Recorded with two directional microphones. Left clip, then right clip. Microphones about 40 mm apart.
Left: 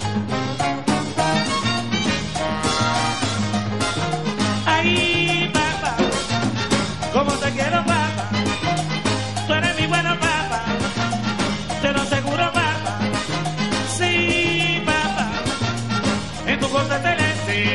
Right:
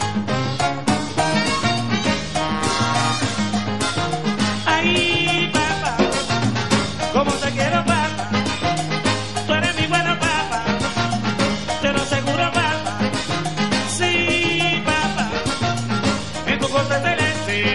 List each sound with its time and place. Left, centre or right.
0.6 s music: right
4.6 s music: right
7.2 s music: right
7.8 s salsa music: centre
9.0 s music: right
11.8 s music: right